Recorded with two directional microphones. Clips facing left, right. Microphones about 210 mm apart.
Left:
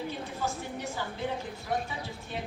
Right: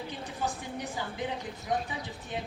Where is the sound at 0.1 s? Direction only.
15° right (ahead or behind).